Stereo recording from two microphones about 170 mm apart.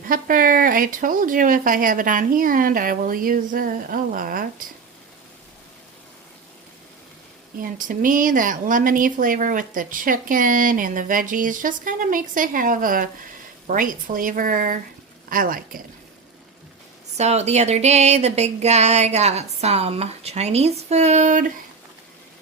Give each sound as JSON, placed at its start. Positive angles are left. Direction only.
{"t": 0.1, "sound": "speech", "side_deg": -55}
{"t": 7.6, "sound": "speech", "side_deg": -50}
{"t": 17.2, "sound": "a sound", "side_deg": -40}